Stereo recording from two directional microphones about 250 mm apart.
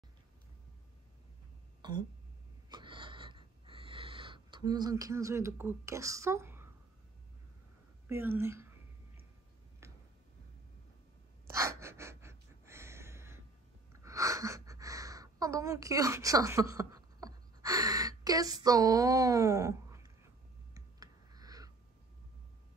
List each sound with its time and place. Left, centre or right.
1.8 s throat clearing: centre
2.7 s wheeze: centre
8.1 s a woman's voice: centre
11.4 s gasp: centre
14.0 s a sound: centre